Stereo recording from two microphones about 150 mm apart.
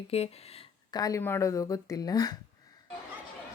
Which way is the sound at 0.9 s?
25° left (ahead or behind).